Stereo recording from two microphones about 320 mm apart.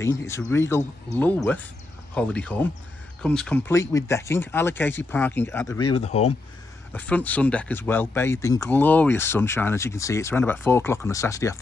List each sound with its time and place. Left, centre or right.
0.0 s speech: centre
5.9 s speech: centre
6.9 s speech: centre